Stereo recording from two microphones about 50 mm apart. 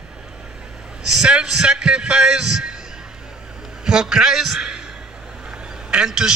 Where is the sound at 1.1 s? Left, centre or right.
Centre.